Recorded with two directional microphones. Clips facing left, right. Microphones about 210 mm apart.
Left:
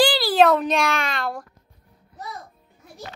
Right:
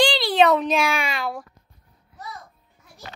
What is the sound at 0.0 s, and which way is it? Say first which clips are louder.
A child's voice: left 1 dB; 5° left (ahead or behind).